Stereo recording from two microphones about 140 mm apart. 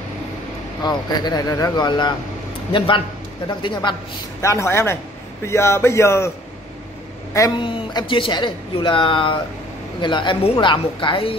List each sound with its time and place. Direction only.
0.8 s speech: 30° left (ahead or behind)
3.4 s speech: 35° left (ahead or behind)
4.4 s speech: 20° left (ahead or behind)
7.5 s speech: 35° left (ahead or behind)